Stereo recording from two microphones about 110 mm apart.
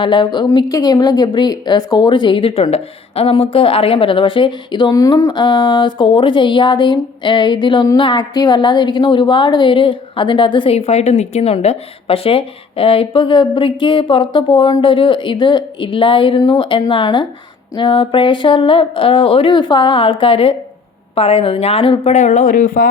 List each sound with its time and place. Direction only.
0.0 s speech: 45° left (ahead or behind); by 5.3 s 30° left (ahead or behind)
5.3 s speech: 45° left (ahead or behind)
10.8 s a woman's voice: 80° left